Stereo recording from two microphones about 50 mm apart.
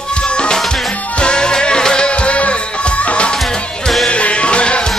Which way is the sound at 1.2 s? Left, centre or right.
Centre.